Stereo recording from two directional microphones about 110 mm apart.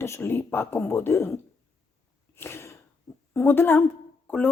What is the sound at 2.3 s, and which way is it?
Cough, 25° left (ahead or behind).